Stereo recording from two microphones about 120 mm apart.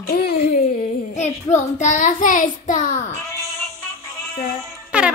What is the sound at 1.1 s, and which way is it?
Child singing, 85° left.